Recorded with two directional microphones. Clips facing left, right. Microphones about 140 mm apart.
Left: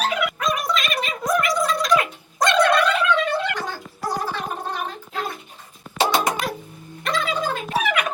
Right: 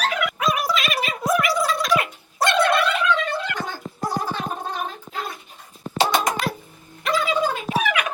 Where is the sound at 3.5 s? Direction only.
50° right (ahead or behind).